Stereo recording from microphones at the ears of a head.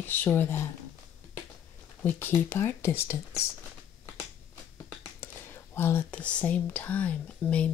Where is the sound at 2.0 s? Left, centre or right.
Left.